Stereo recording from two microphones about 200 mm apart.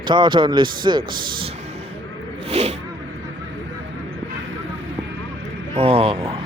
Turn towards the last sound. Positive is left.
turn(degrees=-30)  # may be behind; listen again after turning